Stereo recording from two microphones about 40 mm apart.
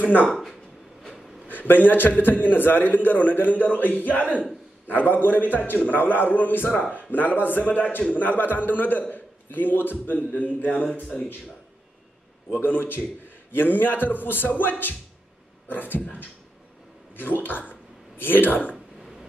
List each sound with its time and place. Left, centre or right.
0.0 s a man's voice: left
0.3 s a sound: centre
1.5 s a man's voice: left
6.7 s speech: left
7.1 s a man's voice: left
11.1 s speech: left
12.4 s a man's voice: left
17.1 s a man's voice: left